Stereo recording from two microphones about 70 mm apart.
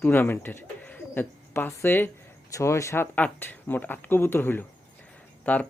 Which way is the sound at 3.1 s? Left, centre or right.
Left.